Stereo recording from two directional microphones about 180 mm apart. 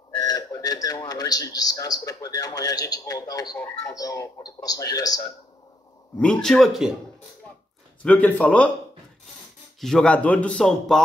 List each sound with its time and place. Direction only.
0.3 s a man's voice: 20° left (ahead or behind)
6.1 s speech: 5° left (ahead or behind)
8.0 s speech: 5° left (ahead or behind)
9.8 s speech: 5° left (ahead or behind)